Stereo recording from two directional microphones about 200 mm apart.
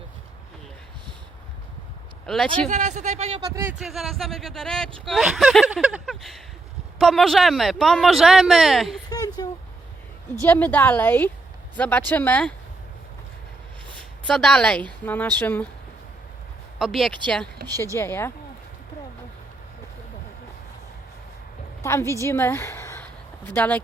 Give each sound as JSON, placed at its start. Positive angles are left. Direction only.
{"t": 2.2, "sound": "speech", "side_deg": 0}
{"t": 2.6, "sound": "speech", "side_deg": -35}
{"t": 9.0, "sound": "a sound", "side_deg": 20}
{"t": 10.4, "sound": "a woman's voice", "side_deg": 10}
{"t": 13.9, "sound": "a woman's voice", "side_deg": 5}
{"t": 16.7, "sound": "a woman's voice", "side_deg": 0}
{"t": 21.8, "sound": "a woman's voice", "side_deg": 15}